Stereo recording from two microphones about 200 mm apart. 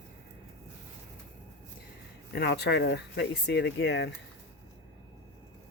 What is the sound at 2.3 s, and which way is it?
Speech, 55° left (ahead or behind).